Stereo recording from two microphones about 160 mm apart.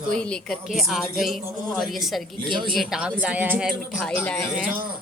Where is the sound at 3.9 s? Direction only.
10° left (ahead or behind).